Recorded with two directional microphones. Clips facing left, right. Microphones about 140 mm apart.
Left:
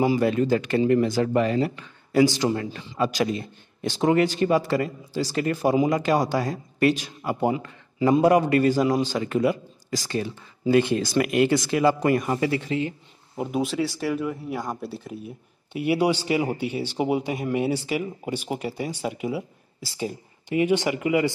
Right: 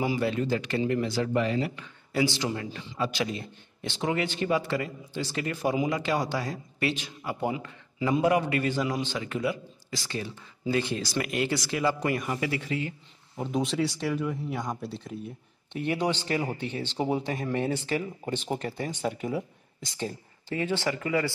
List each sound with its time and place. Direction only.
0.0 s speech: 40° left (ahead or behind)
0.3 s speech: 50° left (ahead or behind)
10.2 s speech: 60° left (ahead or behind); by 12.9 s 25° left (ahead or behind)
13.6 s speech: centre (ahead or behind)